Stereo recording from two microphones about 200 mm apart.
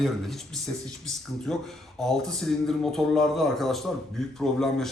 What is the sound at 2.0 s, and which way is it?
A man's voice, centre (ahead or behind).